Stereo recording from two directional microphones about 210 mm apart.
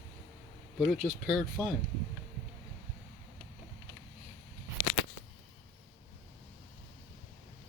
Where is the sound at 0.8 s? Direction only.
Centre (ahead or behind).